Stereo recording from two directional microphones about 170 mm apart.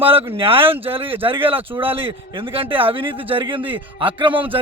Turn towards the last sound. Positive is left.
turn(degrees=-30)  # may be behind; listen again after turning